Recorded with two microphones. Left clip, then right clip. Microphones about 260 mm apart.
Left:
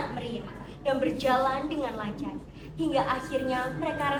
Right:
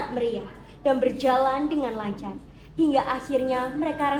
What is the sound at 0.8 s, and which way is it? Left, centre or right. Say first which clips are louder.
A woman's voice: right 5 dB; right.